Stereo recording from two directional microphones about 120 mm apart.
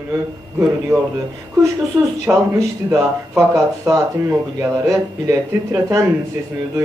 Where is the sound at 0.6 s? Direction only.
20° right (ahead or behind).